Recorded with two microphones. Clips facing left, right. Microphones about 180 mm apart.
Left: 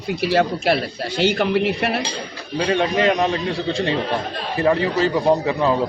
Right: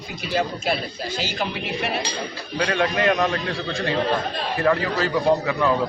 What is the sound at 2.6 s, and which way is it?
Speech, 25° left (ahead or behind).